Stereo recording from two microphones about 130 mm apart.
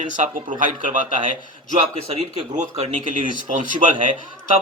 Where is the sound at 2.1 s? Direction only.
50° right (ahead or behind); by 3.8 s 80° right.